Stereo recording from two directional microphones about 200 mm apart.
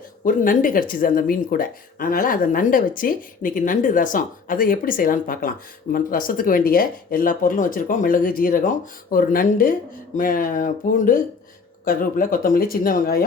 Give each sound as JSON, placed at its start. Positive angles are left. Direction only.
{"t": 0.3, "sound": "speech", "side_deg": 45}